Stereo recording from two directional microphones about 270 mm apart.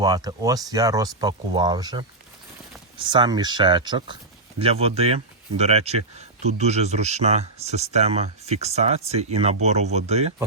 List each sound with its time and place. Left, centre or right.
0.0 s speech: centre
3.0 s speech: centre